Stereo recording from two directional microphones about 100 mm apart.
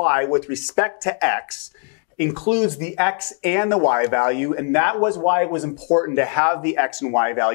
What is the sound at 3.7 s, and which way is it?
Speech, 30° left (ahead or behind).